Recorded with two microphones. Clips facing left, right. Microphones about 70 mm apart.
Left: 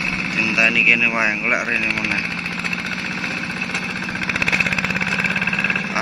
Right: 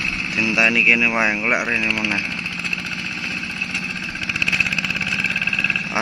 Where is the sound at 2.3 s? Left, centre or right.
Left.